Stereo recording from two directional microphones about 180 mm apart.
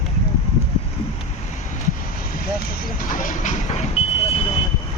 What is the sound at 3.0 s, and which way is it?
Vehicle, 50° left (ahead or behind).